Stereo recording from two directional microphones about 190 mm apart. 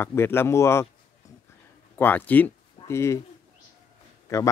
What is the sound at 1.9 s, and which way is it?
Speech, 10° left (ahead or behind).